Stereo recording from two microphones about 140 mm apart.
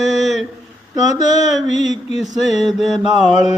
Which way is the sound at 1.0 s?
60° left (ahead or behind).